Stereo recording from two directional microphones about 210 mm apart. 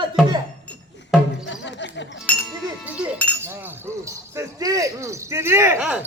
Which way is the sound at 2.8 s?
5° right (ahead or behind).